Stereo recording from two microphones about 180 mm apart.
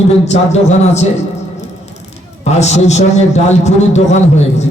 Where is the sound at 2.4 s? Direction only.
40° left (ahead or behind).